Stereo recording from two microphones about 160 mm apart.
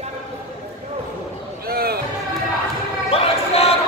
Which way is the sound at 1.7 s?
70° right (ahead or behind).